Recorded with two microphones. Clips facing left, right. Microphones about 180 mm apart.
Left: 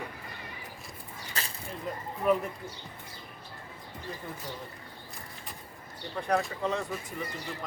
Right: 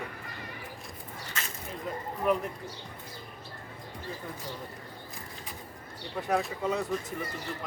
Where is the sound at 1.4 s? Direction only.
35° left (ahead or behind).